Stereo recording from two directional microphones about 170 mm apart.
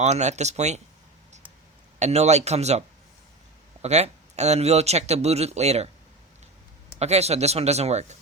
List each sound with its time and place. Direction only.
0.0 s speech: 40° right (ahead or behind)
2.0 s speech: 40° right (ahead or behind)
7.0 s speech: 40° right (ahead or behind)